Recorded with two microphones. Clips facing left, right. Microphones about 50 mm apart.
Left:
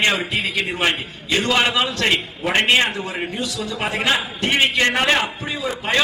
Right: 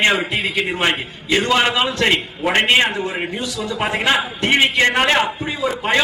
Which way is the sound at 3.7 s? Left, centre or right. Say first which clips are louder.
Right 3 dB; centre.